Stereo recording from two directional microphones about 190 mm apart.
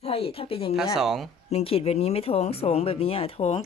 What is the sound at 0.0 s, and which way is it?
Speech, 30° left (ahead or behind).